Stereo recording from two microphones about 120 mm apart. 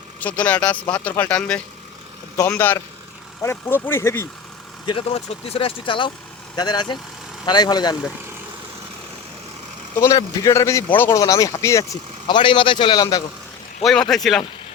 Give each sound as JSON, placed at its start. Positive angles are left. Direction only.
{"t": 0.2, "sound": "speech", "side_deg": 10}
{"t": 4.9, "sound": "a man's voice", "side_deg": 55}
{"t": 10.0, "sound": "speech", "side_deg": 25}
{"t": 11.2, "sound": "speech", "side_deg": 30}
{"t": 12.3, "sound": "a man's voice", "side_deg": 45}
{"t": 14.1, "sound": "speech", "side_deg": 0}